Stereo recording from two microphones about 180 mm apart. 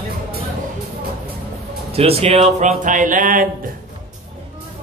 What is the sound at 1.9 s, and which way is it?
Speech, 35° right (ahead or behind).